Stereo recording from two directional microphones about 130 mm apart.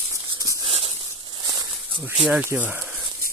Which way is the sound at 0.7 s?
50° right (ahead or behind).